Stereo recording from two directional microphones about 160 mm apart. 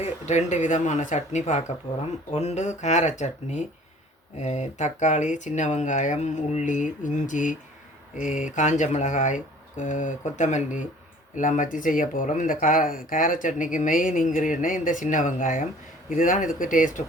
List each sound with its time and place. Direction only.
0.0 s speech: 45° left (ahead or behind)